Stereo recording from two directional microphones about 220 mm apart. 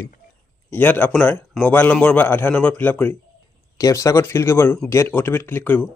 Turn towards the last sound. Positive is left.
turn(degrees=10)  # may be behind; listen again after turning